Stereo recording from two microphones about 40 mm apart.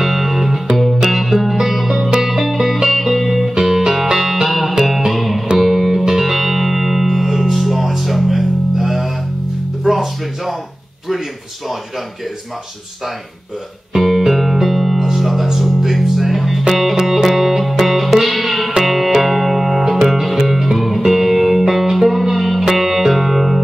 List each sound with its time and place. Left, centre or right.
0.0 s music: centre
13.9 s music: centre